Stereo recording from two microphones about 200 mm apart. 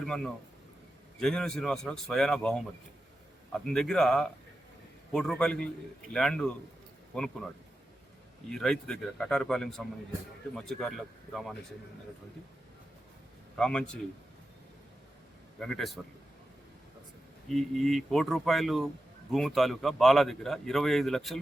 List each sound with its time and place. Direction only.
0.0 s a man's voice: 5° left (ahead or behind)
8.4 s a man's voice: 5° left (ahead or behind)
13.6 s a man's voice: 5° left (ahead or behind)
15.5 s a man's voice: 5° left (ahead or behind)
17.5 s a man's voice: centre (ahead or behind)